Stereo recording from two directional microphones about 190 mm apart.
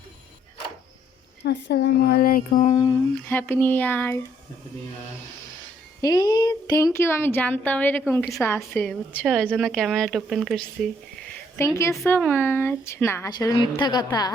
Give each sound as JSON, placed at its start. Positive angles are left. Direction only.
{"t": 1.5, "sound": "speech", "side_deg": 60}
{"t": 2.9, "sound": "a woman's voice", "side_deg": 10}
{"t": 6.0, "sound": "a woman's voice", "side_deg": 20}
{"t": 11.5, "sound": "a woman's voice", "side_deg": 15}